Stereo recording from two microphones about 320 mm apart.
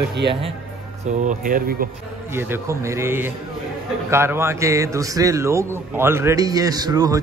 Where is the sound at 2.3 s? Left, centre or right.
Centre.